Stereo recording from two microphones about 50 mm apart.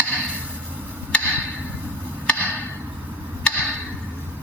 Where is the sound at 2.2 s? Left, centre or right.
Left.